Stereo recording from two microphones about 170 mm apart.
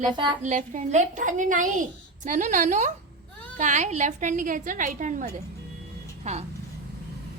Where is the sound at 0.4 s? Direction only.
45° right (ahead or behind).